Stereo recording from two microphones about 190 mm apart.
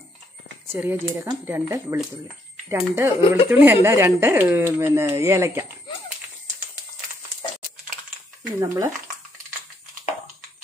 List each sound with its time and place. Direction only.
0.7 s speech: 10° right (ahead or behind)
8.5 s speech: 20° right (ahead or behind)